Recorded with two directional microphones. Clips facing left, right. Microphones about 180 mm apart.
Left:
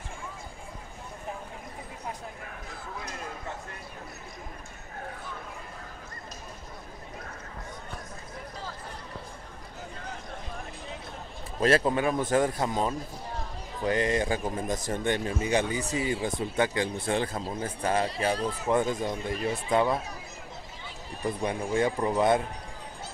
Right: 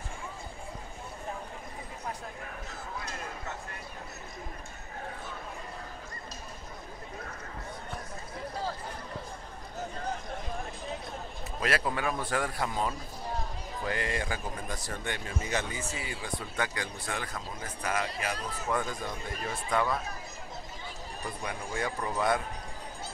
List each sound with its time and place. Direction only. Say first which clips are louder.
11.6 s a man's voice: left 7 dB; 25° left (ahead or behind)
15.7 s speech: left 7 dB; 35° left (ahead or behind)
16.0 s a man's voice: left 9 dB; 25° left (ahead or behind)
21.4 s a man's voice: left 8 dB; 25° left (ahead or behind)